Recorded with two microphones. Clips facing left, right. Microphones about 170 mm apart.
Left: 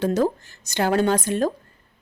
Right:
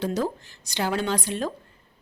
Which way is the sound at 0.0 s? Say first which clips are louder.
Left 5 dB; 50° left (ahead or behind).